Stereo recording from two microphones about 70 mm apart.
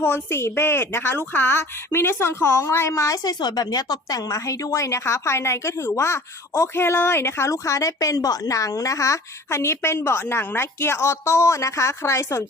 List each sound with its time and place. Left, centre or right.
0.0 s a woman's voice: left
3.2 s speech: left
4.3 s a woman's voice: left
7.5 s speech: left